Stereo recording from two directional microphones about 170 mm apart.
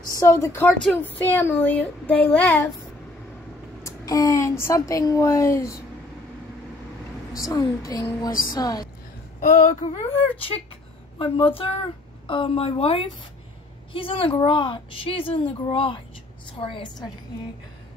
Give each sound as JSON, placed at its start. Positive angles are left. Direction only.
{"t": 0.2, "sound": "speech", "side_deg": 15}
{"t": 3.8, "sound": "speech", "side_deg": 20}
{"t": 7.3, "sound": "speech", "side_deg": 20}
{"t": 8.3, "sound": "speech", "side_deg": 55}
{"t": 8.5, "sound": "speech", "side_deg": 20}
{"t": 9.4, "sound": "a woman's voice", "side_deg": 40}